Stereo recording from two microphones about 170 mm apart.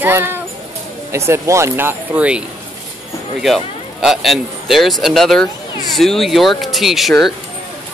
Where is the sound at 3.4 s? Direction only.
Centre (ahead or behind).